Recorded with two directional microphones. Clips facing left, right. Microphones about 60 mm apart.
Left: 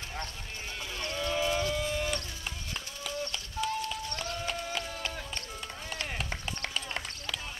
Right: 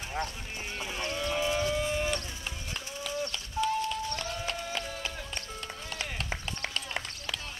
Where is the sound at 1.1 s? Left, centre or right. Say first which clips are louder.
Left 1 dB; centre.